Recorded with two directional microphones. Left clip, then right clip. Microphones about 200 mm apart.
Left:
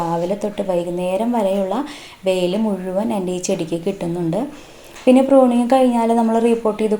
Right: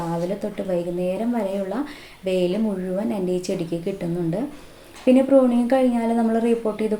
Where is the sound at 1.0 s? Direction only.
10° left (ahead or behind).